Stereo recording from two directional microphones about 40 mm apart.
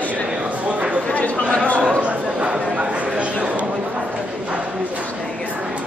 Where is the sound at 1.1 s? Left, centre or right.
Left.